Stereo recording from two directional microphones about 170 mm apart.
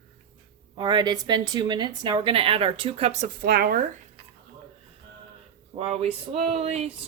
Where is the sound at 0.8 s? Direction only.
25° right (ahead or behind).